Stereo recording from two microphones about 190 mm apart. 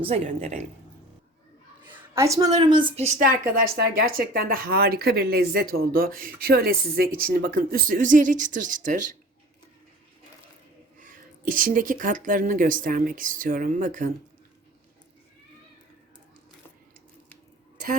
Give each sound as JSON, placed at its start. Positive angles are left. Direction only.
{"t": 0.0, "sound": "a woman's voice", "side_deg": -35}
{"t": 1.9, "sound": "a woman's voice", "side_deg": -15}
{"t": 3.5, "sound": "speech", "side_deg": -55}
{"t": 10.9, "sound": "speech", "side_deg": -45}